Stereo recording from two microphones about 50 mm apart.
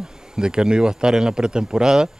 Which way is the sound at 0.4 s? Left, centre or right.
Centre.